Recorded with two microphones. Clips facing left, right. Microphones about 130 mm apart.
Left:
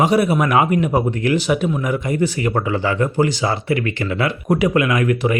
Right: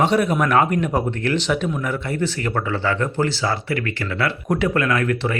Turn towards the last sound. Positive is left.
turn(degrees=15)  # may be behind; listen again after turning